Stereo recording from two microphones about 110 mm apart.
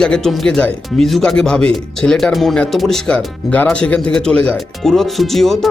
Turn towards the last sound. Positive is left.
turn(degrees=0)  # may be behind; listen again after turning